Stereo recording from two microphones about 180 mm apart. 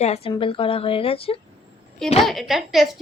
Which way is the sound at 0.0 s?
35° left (ahead or behind).